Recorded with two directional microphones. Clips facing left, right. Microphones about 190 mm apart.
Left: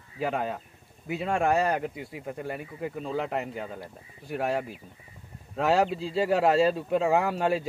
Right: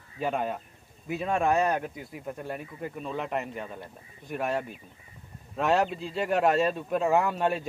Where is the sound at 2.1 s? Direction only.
25° left (ahead or behind).